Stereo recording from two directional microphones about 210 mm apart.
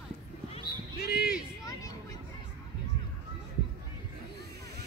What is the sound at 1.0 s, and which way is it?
Basketball bounce, 50° left (ahead or behind).